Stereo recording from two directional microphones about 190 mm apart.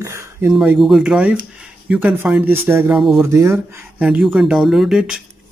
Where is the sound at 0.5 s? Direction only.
5° right (ahead or behind).